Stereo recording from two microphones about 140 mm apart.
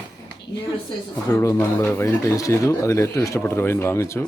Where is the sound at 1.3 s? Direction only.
20° left (ahead or behind).